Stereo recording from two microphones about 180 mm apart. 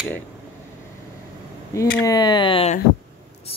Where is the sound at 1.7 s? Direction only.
15° left (ahead or behind).